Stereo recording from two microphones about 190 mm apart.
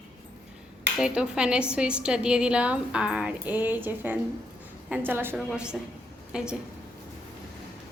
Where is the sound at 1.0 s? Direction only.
5° right (ahead or behind).